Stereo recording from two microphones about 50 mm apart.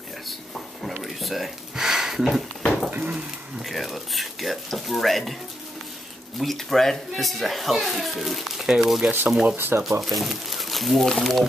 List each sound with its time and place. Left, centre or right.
0.8 s a sound: centre
2.9 s dishes: right
3.6 s speech: centre
6.4 s speech: centre
9.6 s speech: right
9.8 s speech: centre